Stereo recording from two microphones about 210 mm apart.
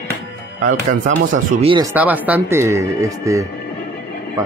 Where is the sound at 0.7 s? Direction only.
40° right (ahead or behind).